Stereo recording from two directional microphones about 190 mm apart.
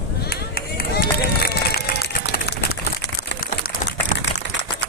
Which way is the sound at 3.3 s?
50° left (ahead or behind).